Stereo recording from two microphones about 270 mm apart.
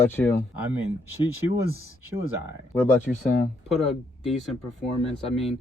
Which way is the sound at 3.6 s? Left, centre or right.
Centre.